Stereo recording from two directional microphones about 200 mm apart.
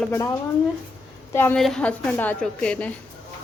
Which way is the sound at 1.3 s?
10° left (ahead or behind).